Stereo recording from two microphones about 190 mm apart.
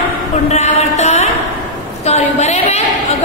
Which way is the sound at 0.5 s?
35° left (ahead or behind).